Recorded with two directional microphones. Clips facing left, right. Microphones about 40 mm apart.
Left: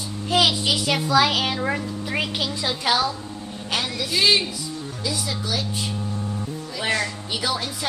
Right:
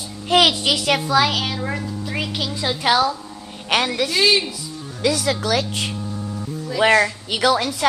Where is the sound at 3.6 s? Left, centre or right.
Right.